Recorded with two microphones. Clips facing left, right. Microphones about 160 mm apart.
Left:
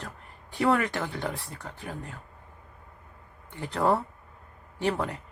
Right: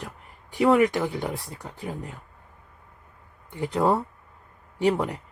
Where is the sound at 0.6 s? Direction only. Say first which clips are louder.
Right 6 dB; 15° right (ahead or behind).